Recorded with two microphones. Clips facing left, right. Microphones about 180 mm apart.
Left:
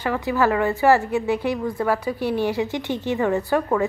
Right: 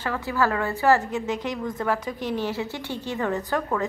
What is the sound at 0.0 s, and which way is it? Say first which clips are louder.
A woman's voice: left 4 dB; 15° left (ahead or behind).